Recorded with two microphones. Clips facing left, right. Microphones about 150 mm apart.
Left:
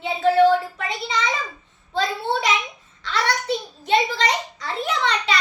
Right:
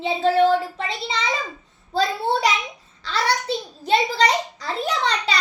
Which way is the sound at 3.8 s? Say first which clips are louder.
Right 1 dB; 35° right (ahead or behind).